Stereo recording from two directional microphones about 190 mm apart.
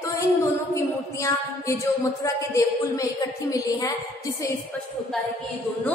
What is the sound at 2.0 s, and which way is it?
A woman's voice, 15° left (ahead or behind).